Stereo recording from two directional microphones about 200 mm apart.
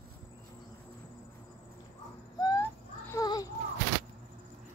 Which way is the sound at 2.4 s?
15° left (ahead or behind).